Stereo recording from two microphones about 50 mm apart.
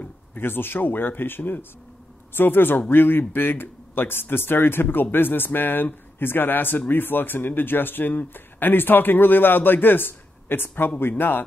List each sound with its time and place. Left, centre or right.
0.0 s speech: left